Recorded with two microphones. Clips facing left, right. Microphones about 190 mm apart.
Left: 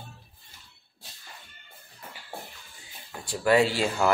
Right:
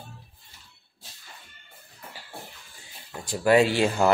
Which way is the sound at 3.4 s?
20° right (ahead or behind).